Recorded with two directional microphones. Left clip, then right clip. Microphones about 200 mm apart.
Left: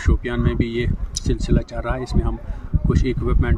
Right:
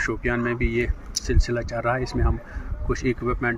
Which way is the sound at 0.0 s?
10° left (ahead or behind).